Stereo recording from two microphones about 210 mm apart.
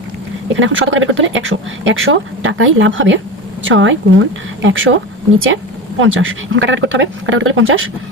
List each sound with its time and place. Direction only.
0.5 s speech: 65° right (ahead or behind)
6.0 s speech: 65° right (ahead or behind)